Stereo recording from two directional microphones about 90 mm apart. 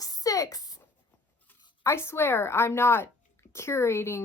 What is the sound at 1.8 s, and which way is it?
Speech, 30° left (ahead or behind).